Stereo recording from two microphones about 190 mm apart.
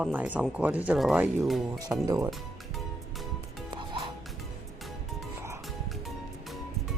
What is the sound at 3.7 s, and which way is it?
Music, 25° right (ahead or behind).